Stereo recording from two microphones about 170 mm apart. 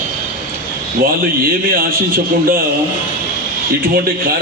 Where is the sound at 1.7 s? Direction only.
55° right (ahead or behind).